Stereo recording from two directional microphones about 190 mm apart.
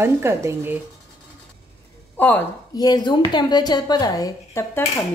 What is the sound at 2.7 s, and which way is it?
A woman's voice, 20° left (ahead or behind).